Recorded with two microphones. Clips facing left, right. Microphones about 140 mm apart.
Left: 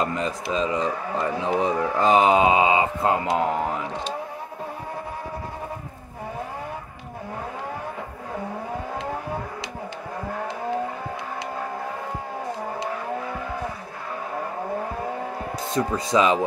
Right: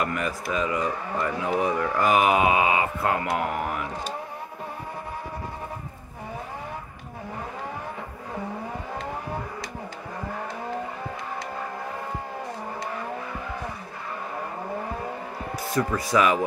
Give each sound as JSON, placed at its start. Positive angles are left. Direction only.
{"t": 0.0, "sound": "speech", "side_deg": 25}
{"t": 15.7, "sound": "speech", "side_deg": 20}